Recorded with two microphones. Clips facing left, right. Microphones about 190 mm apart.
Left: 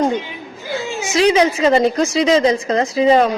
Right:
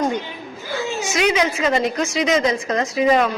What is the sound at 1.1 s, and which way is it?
A woman's voice, 30° left (ahead or behind).